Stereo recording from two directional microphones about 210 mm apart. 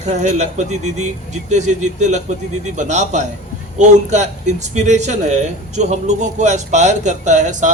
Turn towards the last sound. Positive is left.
turn(degrees=-35)  # may be behind; listen again after turning